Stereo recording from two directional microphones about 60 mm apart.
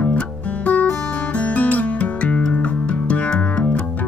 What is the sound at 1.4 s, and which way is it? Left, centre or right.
Music, left.